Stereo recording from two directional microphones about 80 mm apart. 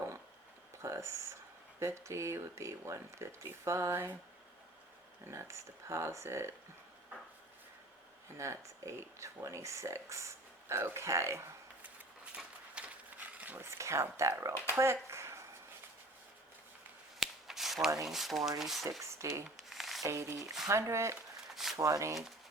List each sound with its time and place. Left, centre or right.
0.8 s speech: right
5.2 s speech: right
8.4 s speech: right
12.7 s a sound: centre
13.6 s speech: right
14.8 s a sound: right
17.2 s a sound: centre
18.1 s speech: centre
19.0 s speech: right
19.5 s rub: centre
20.1 s speech: right
21.5 s a sound: centre
21.8 s speech: right